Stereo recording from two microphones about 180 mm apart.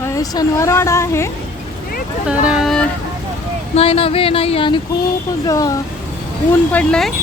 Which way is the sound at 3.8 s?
30° left (ahead or behind).